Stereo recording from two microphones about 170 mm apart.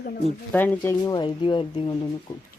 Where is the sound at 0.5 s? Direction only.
10° left (ahead or behind); by 2.0 s 30° left (ahead or behind).